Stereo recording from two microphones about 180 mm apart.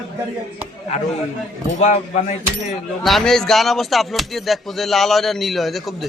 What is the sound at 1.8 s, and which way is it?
Speech, 40° left (ahead or behind).